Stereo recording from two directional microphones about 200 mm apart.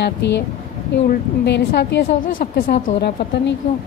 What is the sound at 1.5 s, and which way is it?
A woman's voice, 60° left (ahead or behind).